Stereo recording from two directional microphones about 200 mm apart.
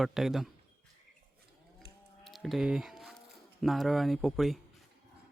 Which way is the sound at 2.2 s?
Centre (ahead or behind).